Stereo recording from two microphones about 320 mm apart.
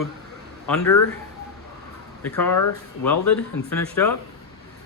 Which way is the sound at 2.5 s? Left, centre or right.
Left.